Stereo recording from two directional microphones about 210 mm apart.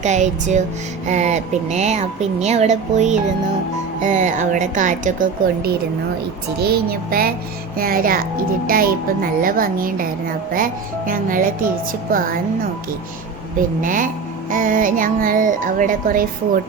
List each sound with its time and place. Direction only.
0.0 s speech: 35° right (ahead or behind)
13.8 s speech: 40° right (ahead or behind)